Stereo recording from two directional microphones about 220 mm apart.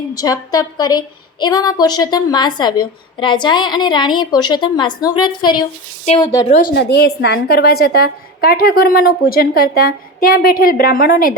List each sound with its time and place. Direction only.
0.1 s a woman's voice: 15° left (ahead or behind)
6.7 s a woman's voice: 50° left (ahead or behind)